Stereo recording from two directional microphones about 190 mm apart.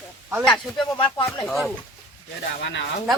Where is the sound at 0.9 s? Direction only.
25° left (ahead or behind).